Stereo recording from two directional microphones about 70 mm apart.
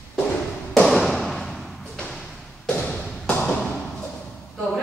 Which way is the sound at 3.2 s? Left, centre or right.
Centre.